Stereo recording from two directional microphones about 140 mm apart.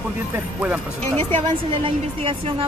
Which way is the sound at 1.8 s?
40° right (ahead or behind).